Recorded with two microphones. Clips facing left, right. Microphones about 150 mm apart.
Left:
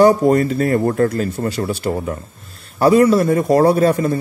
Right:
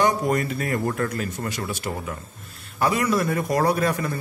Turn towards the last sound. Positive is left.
turn(degrees=30)  # may be behind; listen again after turning